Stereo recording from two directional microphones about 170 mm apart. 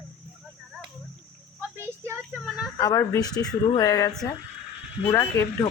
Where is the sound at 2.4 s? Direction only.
Centre (ahead or behind).